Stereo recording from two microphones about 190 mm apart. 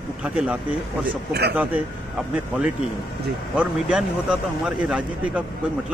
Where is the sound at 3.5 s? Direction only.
5° right (ahead or behind).